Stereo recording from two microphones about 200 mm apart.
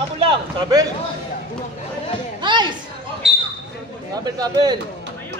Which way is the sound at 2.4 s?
25° right (ahead or behind).